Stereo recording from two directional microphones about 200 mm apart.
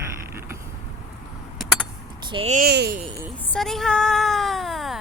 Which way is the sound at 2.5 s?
50° right (ahead or behind).